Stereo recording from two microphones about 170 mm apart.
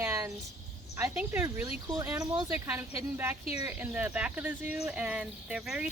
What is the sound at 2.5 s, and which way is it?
A woman's voice, 10° right (ahead or behind).